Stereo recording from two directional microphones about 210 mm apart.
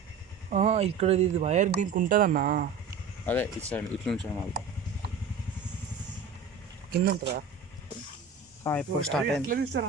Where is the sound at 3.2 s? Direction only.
10° left (ahead or behind).